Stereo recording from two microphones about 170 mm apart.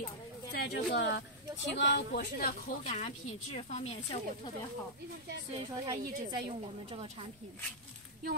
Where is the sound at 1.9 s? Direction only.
75° left (ahead or behind).